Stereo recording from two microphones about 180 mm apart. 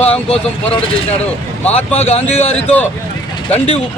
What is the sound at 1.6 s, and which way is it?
Speech, 35° left (ahead or behind).